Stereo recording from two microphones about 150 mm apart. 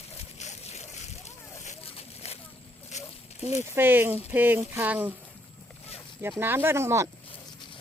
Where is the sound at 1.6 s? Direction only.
45° left (ahead or behind).